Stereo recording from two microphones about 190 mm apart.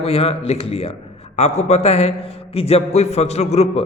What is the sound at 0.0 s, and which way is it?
A man's voice, 30° left (ahead or behind).